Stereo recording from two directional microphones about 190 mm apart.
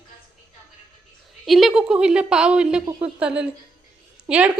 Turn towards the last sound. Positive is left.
turn(degrees=-5)  # may be behind; listen again after turning